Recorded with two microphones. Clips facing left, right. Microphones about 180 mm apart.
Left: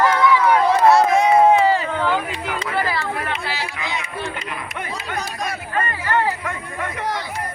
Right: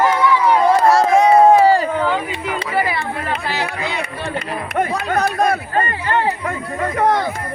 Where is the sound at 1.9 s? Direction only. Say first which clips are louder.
Right 2 dB; centre (ahead or behind).